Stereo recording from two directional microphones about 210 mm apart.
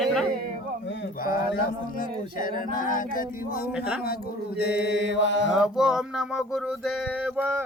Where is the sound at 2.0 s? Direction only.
40° left (ahead or behind).